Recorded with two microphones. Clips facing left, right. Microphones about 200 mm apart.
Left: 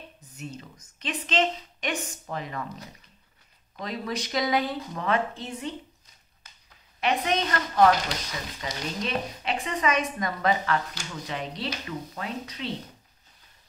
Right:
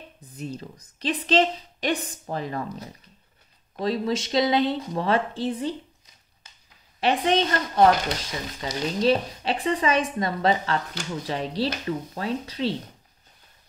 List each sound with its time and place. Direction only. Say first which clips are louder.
0.4 s speech: right 5 dB; 35° right (ahead or behind)
7.0 s speech: right 4 dB; 30° right (ahead or behind)